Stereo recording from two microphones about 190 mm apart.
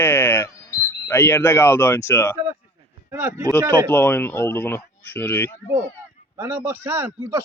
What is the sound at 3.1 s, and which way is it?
Speech, 15° right (ahead or behind).